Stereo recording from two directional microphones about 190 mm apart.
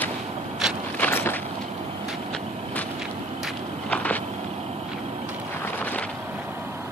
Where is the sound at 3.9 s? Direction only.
5° left (ahead or behind).